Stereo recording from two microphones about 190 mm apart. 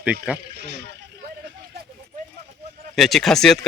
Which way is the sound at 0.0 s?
5° right (ahead or behind).